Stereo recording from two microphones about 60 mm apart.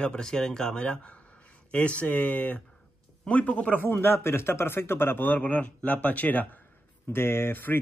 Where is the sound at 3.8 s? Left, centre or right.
Left.